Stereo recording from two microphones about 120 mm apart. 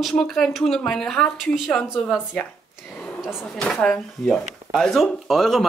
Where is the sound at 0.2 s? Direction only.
5° left (ahead or behind).